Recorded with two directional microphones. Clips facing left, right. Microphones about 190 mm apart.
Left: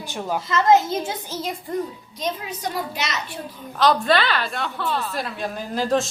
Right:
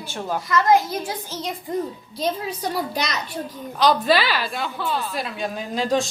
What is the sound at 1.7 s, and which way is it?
Speech, 20° right (ahead or behind).